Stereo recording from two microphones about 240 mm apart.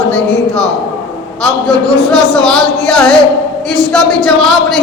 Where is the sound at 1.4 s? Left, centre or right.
Centre.